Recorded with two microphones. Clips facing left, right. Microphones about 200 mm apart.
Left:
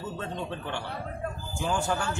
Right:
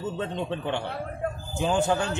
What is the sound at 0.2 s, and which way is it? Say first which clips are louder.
Speech: right 5 dB; 20° right (ahead or behind).